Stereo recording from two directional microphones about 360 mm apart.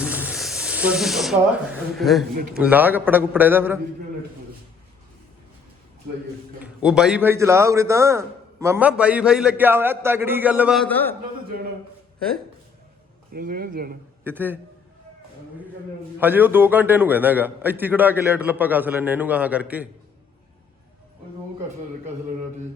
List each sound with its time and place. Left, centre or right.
0.0 s a man's voice: centre
6.6 s a man's voice: centre
13.3 s speech: right
14.3 s a man's voice: centre
16.1 s a man's voice: centre